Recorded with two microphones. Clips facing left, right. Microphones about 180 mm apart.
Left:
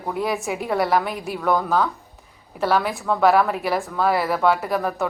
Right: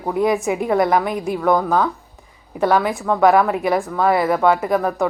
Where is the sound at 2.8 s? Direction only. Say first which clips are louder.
Right 3 dB; centre (ahead or behind).